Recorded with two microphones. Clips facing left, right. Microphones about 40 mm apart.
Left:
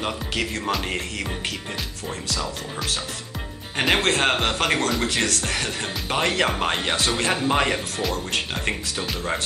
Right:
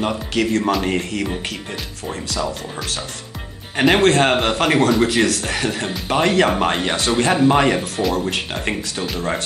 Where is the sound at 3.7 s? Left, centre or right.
Centre.